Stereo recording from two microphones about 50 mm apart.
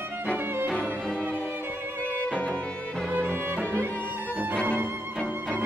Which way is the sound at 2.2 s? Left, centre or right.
Left.